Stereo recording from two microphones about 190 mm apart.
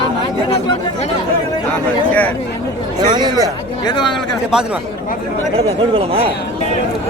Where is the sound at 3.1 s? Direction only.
20° right (ahead or behind).